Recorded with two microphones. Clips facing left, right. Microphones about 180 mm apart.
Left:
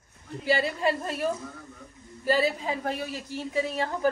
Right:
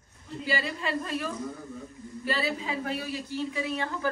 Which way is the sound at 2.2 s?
40° left (ahead or behind).